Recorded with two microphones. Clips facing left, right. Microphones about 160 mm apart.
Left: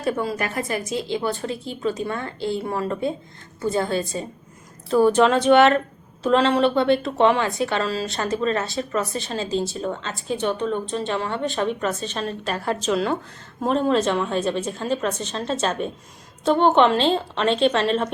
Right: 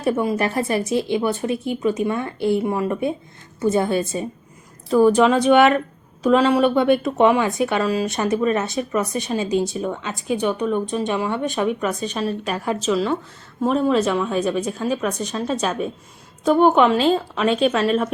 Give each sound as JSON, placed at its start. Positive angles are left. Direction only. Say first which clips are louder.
{"t": 0.0, "sound": "a woman's voice", "louder": "right 4 dB", "side_deg": -20}
{"t": 4.9, "sound": "speech", "louder": "right 2 dB", "side_deg": 0}